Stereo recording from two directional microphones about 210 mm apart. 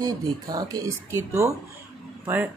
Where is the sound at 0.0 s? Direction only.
15° right (ahead or behind).